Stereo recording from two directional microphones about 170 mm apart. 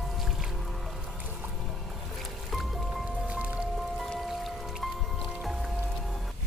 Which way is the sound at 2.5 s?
Centre (ahead or behind).